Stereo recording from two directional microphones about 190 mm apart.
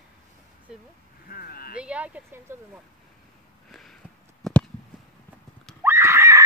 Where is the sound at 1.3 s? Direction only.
50° left (ahead or behind).